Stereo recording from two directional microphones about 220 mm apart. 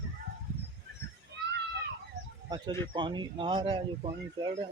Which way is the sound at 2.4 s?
20° right (ahead or behind).